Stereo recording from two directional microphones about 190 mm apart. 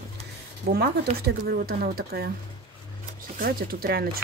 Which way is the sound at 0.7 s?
55° right (ahead or behind).